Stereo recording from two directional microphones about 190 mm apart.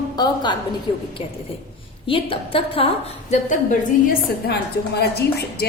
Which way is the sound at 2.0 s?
30° left (ahead or behind).